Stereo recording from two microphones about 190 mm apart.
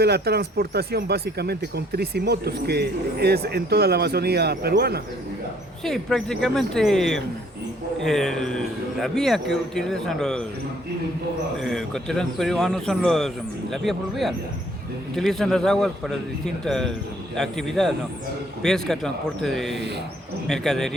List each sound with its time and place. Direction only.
0.0 s speech: 55° right (ahead or behind)
5.8 s a man's voice: 5° left (ahead or behind)
11.6 s a man's voice: centre (ahead or behind)